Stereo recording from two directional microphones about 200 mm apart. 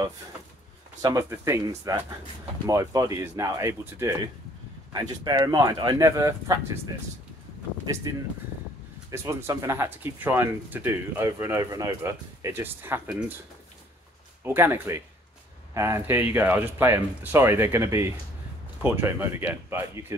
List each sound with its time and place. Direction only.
1.0 s speech: 15° right (ahead or behind)
5.2 s speech: 20° right (ahead or behind)
7.8 s speech: 20° right (ahead or behind)
9.1 s speech: 15° right (ahead or behind)
14.4 s speech: 10° right (ahead or behind)